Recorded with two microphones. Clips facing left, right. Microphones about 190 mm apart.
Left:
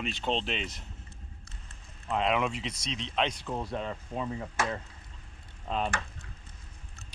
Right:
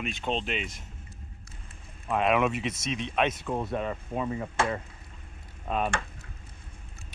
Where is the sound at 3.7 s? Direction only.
10° right (ahead or behind).